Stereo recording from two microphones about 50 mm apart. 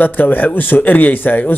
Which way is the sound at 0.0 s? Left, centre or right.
Left.